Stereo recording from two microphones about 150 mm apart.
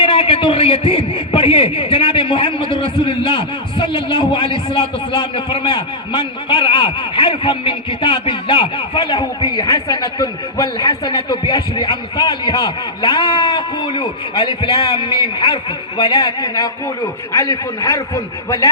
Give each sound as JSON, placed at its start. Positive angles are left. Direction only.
{"t": 0.0, "sound": "a man's voice", "side_deg": 35}
{"t": 2.7, "sound": "a sound", "side_deg": -70}
{"t": 3.0, "sound": "a man's voice", "side_deg": 35}